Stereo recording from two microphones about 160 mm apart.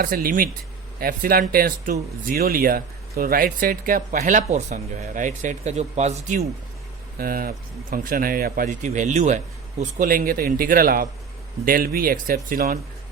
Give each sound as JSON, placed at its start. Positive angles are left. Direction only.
{"t": 0.0, "sound": "speech", "side_deg": -60}
{"t": 7.2, "sound": "speech", "side_deg": -65}